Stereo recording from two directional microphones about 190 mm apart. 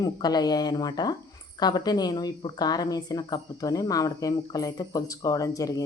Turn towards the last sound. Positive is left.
turn(degrees=15)  # may be behind; listen again after turning